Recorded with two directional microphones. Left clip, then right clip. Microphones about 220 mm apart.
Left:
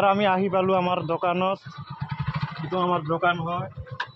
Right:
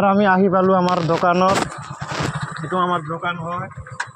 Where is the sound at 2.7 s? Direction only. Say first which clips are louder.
Right 4 dB; 20° right (ahead or behind).